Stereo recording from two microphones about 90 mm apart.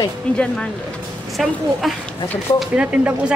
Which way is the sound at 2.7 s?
15° right (ahead or behind).